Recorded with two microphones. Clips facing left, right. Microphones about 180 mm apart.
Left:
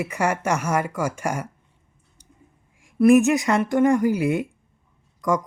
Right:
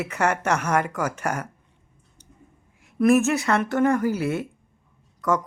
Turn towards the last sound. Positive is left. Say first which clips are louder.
# left 1 dB
turn(degrees=10)  # may be behind; listen again after turning